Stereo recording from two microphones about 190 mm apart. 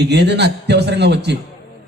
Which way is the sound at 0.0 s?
60° right (ahead or behind).